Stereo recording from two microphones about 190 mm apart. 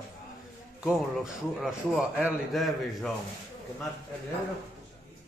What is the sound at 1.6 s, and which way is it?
A man's voice, 5° right (ahead or behind).